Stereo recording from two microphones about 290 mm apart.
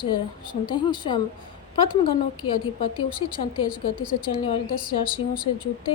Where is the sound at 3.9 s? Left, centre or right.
Left.